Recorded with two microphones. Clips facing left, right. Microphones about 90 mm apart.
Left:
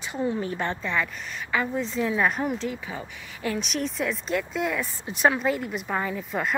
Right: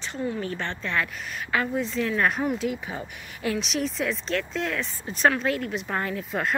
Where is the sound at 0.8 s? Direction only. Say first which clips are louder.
Even; centre (ahead or behind).